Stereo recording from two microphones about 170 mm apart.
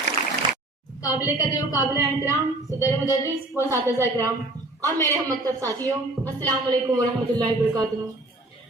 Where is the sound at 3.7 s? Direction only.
15° right (ahead or behind).